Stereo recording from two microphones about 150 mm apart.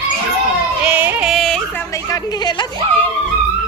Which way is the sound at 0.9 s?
10° right (ahead or behind).